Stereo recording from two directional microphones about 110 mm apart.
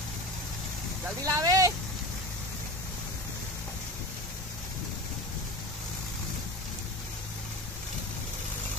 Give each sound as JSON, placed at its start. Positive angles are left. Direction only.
{"t": 1.2, "sound": "speech", "side_deg": -30}